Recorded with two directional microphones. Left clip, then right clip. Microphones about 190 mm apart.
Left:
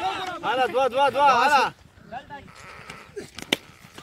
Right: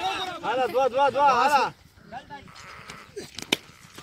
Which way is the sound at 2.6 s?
50° left (ahead or behind).